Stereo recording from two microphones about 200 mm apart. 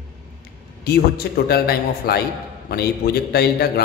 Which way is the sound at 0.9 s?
50° left (ahead or behind).